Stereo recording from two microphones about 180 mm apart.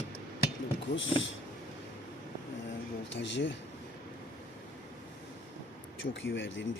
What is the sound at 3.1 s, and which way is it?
Speech, 90° left.